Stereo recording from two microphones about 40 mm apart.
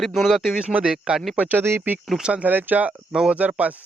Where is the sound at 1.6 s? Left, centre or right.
Right.